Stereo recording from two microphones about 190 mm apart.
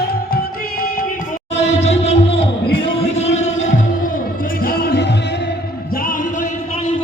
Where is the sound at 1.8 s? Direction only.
35° left (ahead or behind).